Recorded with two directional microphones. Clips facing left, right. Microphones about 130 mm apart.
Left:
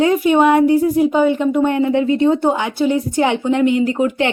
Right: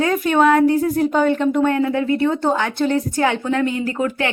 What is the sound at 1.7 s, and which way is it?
A woman's voice, 20° left (ahead or behind).